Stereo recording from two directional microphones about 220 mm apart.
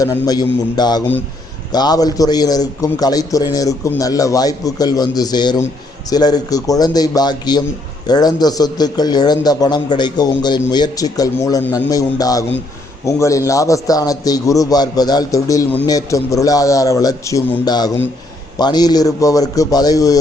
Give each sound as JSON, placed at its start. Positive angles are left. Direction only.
{"t": 0.0, "sound": "a man's voice", "side_deg": 15}